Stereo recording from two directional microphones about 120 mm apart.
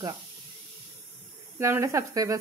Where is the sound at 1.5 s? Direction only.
20° right (ahead or behind).